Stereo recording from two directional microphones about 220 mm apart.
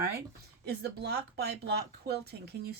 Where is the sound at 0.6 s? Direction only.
45° right (ahead or behind).